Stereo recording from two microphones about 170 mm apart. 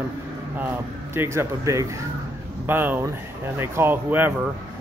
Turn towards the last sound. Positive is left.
turn(degrees=-10)  # may be behind; listen again after turning